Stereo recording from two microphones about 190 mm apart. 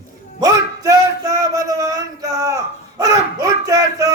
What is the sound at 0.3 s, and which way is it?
Music, 20° right (ahead or behind).